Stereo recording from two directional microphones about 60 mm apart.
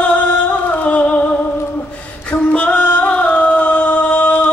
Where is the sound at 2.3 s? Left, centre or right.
Centre.